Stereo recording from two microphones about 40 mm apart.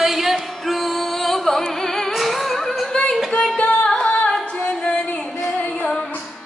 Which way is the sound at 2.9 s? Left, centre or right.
Left.